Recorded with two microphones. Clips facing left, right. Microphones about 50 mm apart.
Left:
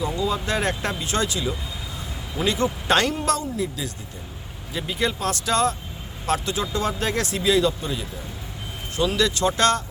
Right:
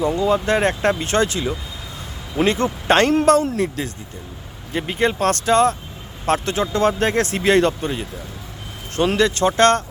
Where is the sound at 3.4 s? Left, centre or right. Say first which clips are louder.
Right 6 dB; right.